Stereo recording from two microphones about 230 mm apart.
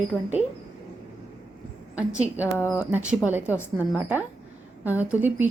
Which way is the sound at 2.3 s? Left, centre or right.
Centre.